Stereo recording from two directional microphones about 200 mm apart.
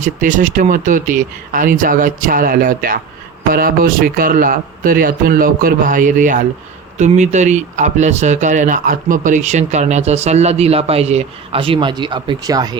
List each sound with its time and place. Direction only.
0.0 s a man's voice: 40° right (ahead or behind); by 12.8 s 20° right (ahead or behind)